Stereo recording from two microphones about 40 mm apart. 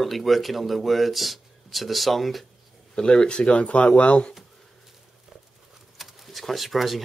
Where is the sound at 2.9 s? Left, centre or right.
Centre.